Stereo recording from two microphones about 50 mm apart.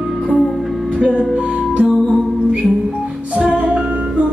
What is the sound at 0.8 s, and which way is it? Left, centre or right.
Music, centre.